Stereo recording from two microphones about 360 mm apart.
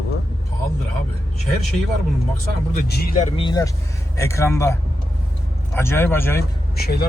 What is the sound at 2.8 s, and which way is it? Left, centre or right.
Speech, left.